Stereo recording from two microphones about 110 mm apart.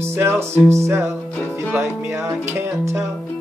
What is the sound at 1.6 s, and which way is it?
Music, 20° right (ahead or behind).